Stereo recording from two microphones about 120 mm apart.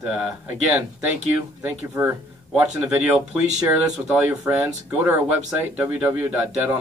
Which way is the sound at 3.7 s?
5° right (ahead or behind).